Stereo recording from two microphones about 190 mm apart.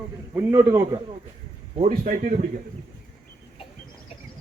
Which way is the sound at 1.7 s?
30° right (ahead or behind).